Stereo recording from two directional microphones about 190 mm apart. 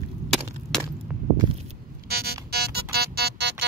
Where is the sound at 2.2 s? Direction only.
55° right (ahead or behind).